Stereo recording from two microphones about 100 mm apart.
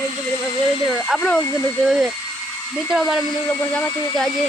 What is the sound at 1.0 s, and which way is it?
Speech, 5° left (ahead or behind).